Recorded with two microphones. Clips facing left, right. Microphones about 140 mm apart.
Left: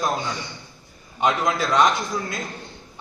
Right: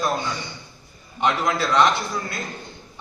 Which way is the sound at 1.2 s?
15° left (ahead or behind).